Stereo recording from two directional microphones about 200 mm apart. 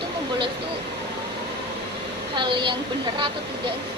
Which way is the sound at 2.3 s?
25° right (ahead or behind).